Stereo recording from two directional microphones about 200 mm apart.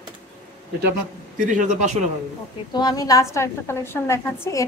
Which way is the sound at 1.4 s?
35° right (ahead or behind).